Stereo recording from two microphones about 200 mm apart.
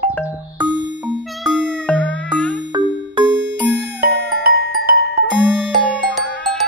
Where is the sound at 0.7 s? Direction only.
65° right (ahead or behind).